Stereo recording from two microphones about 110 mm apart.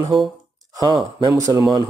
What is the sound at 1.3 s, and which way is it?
Speech, 30° right (ahead or behind).